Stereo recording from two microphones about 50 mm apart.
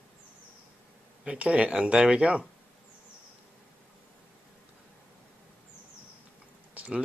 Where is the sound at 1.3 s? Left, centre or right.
Right.